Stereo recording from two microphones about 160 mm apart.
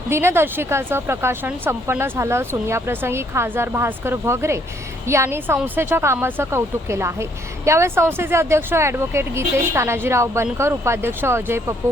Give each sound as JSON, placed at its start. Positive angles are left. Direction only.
{"t": 0.1, "sound": "speech", "side_deg": -15}